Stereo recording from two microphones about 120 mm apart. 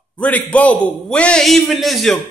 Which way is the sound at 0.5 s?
10° left (ahead or behind).